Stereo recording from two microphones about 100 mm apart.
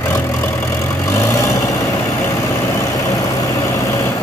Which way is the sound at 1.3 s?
35° left (ahead or behind).